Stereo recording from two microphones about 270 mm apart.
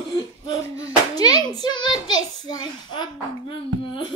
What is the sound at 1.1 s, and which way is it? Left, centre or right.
Hands, centre.